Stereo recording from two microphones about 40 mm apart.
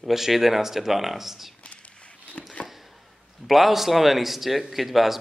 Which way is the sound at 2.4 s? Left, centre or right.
Left.